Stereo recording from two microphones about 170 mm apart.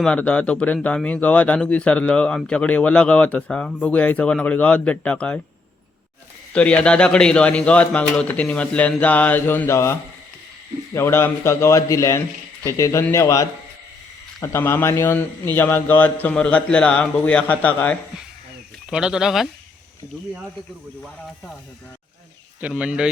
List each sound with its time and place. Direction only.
0.0 s speech: 5° left (ahead or behind)
6.5 s speech: 5° left (ahead or behind)
18.9 s speech: 5° right (ahead or behind)
22.6 s speech: 5° right (ahead or behind)